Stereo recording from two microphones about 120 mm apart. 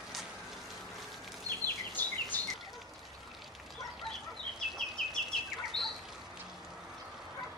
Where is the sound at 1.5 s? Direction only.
30° right (ahead or behind).